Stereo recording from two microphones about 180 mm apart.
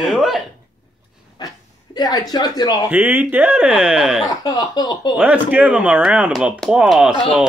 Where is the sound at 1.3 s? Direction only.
20° left (ahead or behind).